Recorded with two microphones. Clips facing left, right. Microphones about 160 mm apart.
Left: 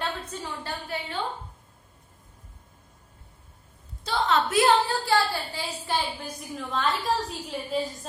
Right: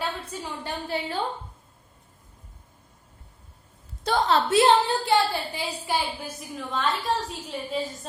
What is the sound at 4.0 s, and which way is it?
Speech, 50° right (ahead or behind).